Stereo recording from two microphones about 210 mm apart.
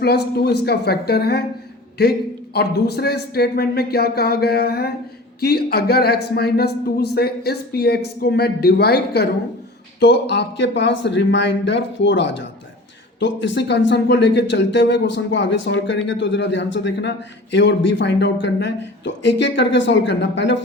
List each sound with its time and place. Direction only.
0.0 s speech: 50° left (ahead or behind)